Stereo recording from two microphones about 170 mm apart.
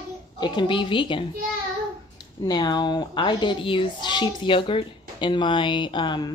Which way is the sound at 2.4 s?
25° left (ahead or behind).